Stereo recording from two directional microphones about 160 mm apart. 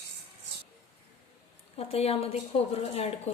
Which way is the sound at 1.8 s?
40° left (ahead or behind).